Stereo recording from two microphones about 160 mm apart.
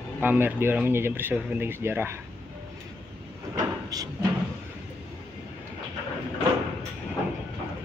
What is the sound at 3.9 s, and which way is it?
Speech, 25° right (ahead or behind).